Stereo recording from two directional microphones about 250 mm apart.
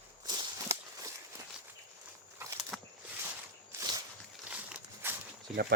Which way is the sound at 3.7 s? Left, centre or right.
Centre.